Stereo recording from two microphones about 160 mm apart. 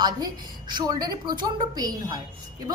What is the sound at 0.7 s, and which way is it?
A woman's voice, 25° right (ahead or behind).